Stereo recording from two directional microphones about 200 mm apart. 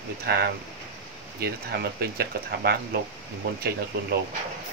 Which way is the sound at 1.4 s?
50° right (ahead or behind).